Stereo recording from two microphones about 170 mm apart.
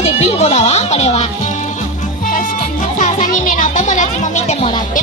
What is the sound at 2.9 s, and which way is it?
A child's voice, 45° left (ahead or behind).